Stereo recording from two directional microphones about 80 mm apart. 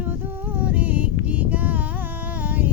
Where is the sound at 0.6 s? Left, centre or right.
Centre.